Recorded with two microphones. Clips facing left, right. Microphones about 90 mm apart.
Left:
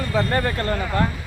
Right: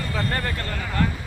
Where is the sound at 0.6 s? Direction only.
30° left (ahead or behind).